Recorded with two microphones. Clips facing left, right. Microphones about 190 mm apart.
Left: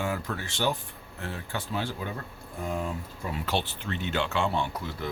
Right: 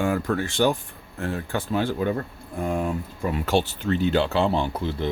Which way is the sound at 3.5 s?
45° right (ahead or behind).